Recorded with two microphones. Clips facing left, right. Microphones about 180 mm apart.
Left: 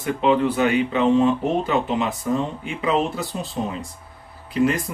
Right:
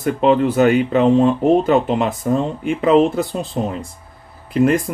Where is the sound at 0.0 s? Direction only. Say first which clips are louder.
Right 4 dB; 45° right (ahead or behind).